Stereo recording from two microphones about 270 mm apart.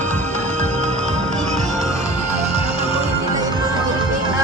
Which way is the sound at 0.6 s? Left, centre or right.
Right.